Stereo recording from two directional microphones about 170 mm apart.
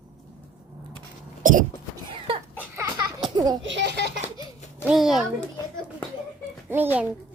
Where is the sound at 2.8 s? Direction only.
25° right (ahead or behind).